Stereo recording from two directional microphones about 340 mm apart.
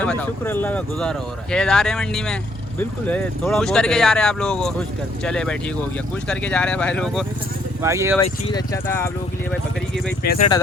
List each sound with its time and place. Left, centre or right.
0.0 s speech: centre
8.2 s speech: centre
10.2 s speech: left